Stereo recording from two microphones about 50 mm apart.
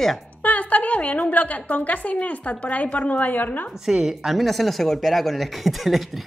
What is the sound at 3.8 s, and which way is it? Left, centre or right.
Speech, centre.